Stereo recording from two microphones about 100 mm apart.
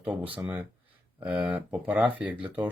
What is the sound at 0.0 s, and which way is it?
Speech, 15° right (ahead or behind).